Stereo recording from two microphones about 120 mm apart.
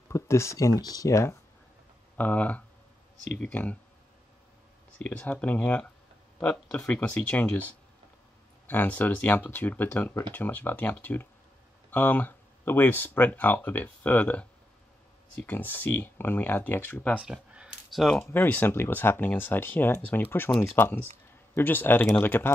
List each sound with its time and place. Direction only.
0.1 s speech: 25° left (ahead or behind)
2.1 s speech: 10° left (ahead or behind)
4.9 s speech: 10° left (ahead or behind)
8.6 s speech: 15° left (ahead or behind)
17.2 s a sound: 5° right (ahead or behind)
18.0 s speech: 5° left (ahead or behind)
18.3 s speech: 15° left (ahead or behind)